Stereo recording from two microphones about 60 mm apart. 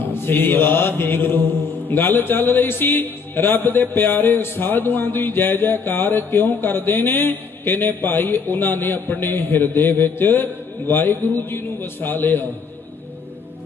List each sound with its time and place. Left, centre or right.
0.0 s speech: left